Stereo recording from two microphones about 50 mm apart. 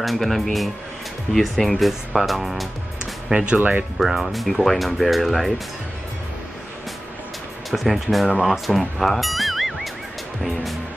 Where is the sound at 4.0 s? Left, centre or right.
Centre.